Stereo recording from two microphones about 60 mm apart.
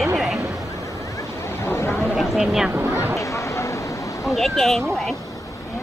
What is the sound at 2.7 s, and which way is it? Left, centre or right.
Speech, right.